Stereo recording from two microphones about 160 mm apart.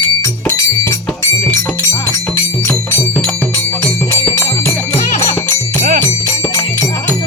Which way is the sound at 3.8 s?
15° left (ahead or behind).